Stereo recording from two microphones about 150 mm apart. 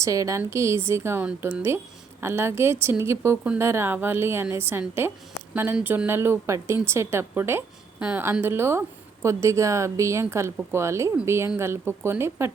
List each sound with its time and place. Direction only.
0.0 s a woman's voice: 20° right (ahead or behind)